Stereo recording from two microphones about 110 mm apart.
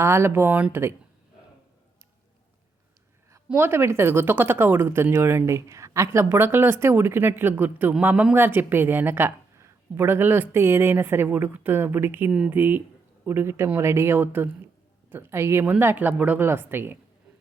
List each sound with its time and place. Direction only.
0.0 s speech: 25° right (ahead or behind)
3.5 s speech: 20° right (ahead or behind)